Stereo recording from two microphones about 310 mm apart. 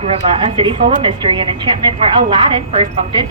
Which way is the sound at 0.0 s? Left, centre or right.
Centre.